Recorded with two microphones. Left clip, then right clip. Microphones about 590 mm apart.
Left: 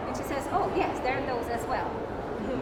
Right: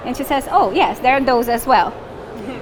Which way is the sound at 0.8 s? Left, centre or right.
Right.